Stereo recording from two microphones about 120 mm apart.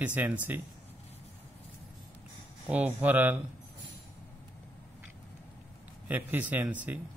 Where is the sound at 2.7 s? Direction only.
10° right (ahead or behind).